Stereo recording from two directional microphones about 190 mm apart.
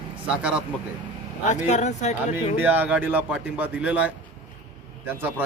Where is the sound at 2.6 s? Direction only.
10° right (ahead or behind).